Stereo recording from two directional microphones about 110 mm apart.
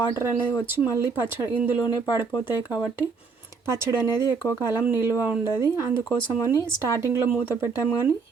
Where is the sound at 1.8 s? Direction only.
40° left (ahead or behind).